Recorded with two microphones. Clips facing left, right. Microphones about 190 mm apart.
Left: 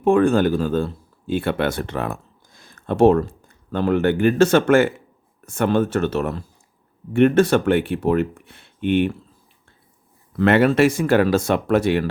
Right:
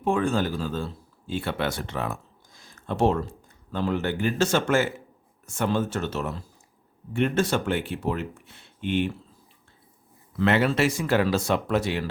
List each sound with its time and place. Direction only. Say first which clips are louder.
0.0 s speech: left 8 dB; 55° left (ahead or behind)
10.3 s speech: left 7 dB; 55° left (ahead or behind)